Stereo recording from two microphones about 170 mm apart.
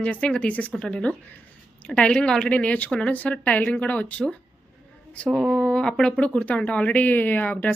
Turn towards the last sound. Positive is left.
turn(degrees=10)  # may be behind; listen again after turning